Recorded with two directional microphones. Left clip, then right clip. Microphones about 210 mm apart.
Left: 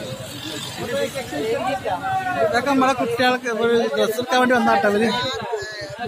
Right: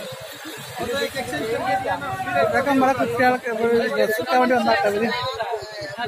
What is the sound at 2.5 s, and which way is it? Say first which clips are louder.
A man's voice: even; 5° left (ahead or behind).